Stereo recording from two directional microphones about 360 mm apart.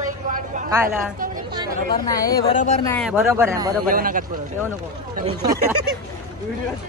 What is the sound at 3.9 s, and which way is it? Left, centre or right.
Speech, right.